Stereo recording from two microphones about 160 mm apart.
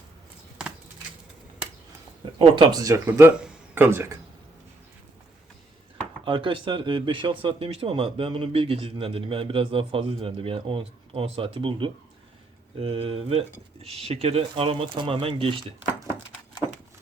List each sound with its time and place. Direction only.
2.4 s speech: 30° right (ahead or behind)
6.2 s speech: 30° right (ahead or behind)